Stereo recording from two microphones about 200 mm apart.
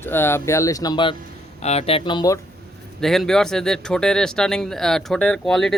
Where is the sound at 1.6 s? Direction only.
30° left (ahead or behind).